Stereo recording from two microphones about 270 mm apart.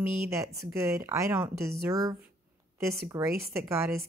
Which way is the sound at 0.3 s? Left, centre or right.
Centre.